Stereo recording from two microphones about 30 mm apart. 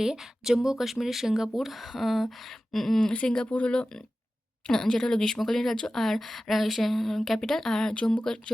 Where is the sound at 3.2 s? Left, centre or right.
Left.